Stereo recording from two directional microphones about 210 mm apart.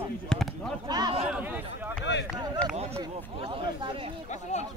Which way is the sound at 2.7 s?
30° right (ahead or behind).